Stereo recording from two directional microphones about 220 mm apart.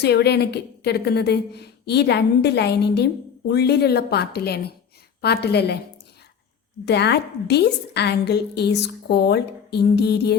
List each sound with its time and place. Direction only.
0.0 s a woman's voice: 50° left (ahead or behind)
6.8 s a woman's voice: 50° left (ahead or behind)